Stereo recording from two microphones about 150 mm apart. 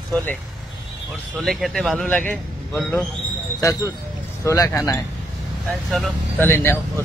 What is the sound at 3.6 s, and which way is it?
Speech, 20° left (ahead or behind).